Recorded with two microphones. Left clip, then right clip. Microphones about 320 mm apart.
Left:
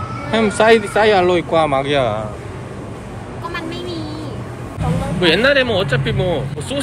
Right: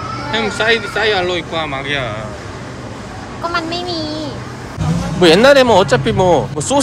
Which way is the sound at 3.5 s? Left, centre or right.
Centre.